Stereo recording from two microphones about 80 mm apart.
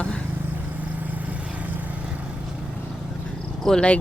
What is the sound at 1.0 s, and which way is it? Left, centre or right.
Vehicle, centre.